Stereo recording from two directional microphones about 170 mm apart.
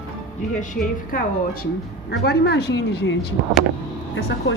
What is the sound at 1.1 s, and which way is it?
Speech, 55° left (ahead or behind).